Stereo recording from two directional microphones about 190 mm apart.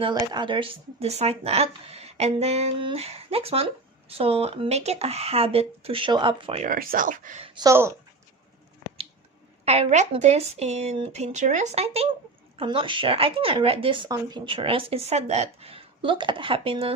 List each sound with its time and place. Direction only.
0.0 s speech: 25° right (ahead or behind); by 7.4 s 45° right (ahead or behind)
7.4 s speech: 20° right (ahead or behind)
9.6 s a woman's voice: 35° right (ahead or behind)